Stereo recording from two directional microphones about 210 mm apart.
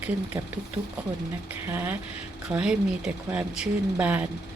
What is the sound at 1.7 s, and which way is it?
Speech, 10° right (ahead or behind).